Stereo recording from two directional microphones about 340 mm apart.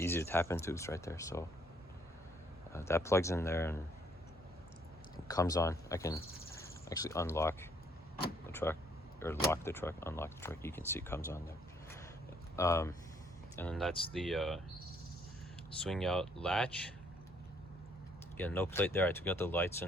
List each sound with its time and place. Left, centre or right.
0.0 s speech: centre
2.7 s speech: centre
5.3 s speech: centre
12.5 s speech: centre
15.8 s speech: centre
18.3 s speech: centre